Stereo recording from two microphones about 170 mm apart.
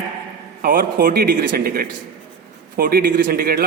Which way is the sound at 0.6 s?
60° right (ahead or behind).